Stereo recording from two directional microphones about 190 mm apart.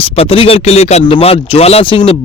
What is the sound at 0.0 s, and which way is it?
A man's voice, 30° left (ahead or behind).